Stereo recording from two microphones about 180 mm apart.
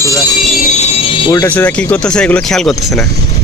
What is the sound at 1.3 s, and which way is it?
Speech, 15° left (ahead or behind).